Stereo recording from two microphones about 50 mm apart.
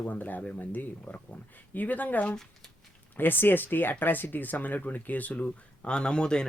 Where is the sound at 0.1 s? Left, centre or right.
Left.